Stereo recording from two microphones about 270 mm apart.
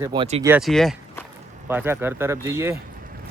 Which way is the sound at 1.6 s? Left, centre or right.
Centre.